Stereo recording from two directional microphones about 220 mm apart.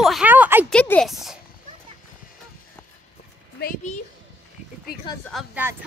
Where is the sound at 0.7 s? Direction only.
5° left (ahead or behind).